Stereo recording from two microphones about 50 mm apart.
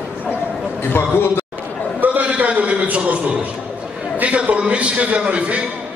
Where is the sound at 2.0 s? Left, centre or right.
Right.